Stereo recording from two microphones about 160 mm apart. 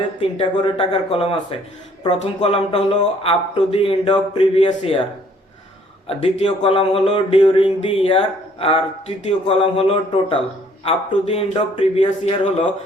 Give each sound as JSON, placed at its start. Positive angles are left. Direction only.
{"t": 0.2, "sound": "speech", "side_deg": 35}
{"t": 6.1, "sound": "speech", "side_deg": 35}